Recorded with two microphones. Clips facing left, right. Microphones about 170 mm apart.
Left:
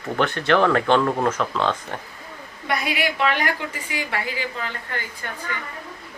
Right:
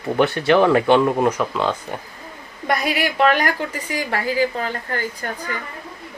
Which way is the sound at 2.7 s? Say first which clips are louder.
Right 3 dB; 40° right (ahead or behind).